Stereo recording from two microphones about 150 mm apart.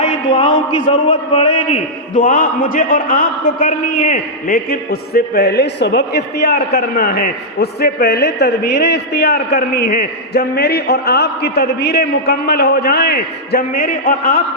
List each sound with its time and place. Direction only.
0.0 s a man's voice: 35° left (ahead or behind)
2.1 s a man's voice: 65° left (ahead or behind)